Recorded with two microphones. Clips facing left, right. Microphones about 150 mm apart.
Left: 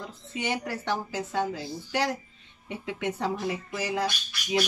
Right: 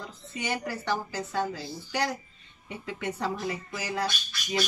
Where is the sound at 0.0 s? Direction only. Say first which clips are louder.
Left 2 dB; 10° left (ahead or behind).